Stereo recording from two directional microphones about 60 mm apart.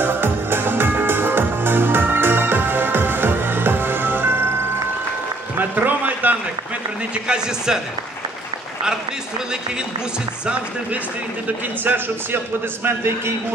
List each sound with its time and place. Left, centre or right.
0.0 s music: right
5.6 s a sound: right
7.2 s speech: centre
10.4 s speech: centre
12.8 s a man's voice: right